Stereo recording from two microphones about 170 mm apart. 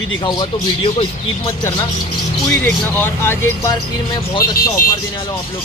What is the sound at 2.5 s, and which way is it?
Speech, 10° left (ahead or behind).